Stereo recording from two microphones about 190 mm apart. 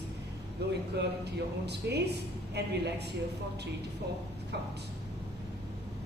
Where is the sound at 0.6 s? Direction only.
60° right (ahead or behind).